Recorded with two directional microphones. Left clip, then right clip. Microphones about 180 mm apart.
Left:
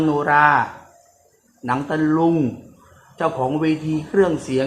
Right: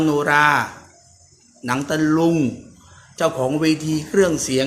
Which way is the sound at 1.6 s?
10° right (ahead or behind).